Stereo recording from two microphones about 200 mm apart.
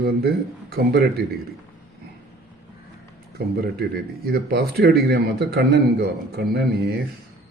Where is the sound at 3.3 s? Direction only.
50° right (ahead or behind).